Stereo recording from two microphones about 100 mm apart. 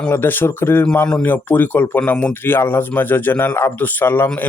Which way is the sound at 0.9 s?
10° left (ahead or behind).